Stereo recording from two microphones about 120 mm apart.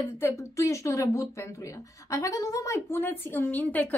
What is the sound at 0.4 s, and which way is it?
A woman's voice, 25° left (ahead or behind).